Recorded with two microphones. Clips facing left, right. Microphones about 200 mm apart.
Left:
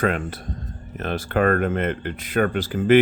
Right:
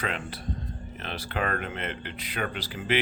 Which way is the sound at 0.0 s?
45° left (ahead or behind).